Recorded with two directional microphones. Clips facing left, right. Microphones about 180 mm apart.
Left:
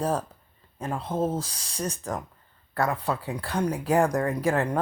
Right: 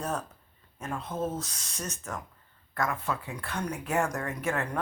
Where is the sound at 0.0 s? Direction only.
30° left (ahead or behind).